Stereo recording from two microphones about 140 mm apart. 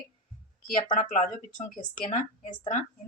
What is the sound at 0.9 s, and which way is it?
Speech, 60° left (ahead or behind).